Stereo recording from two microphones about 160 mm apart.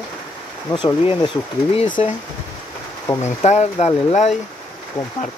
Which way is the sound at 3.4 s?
45° left (ahead or behind).